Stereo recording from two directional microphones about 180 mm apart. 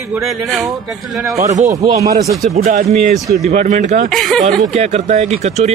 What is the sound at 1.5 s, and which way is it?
Speech, 40° right (ahead or behind).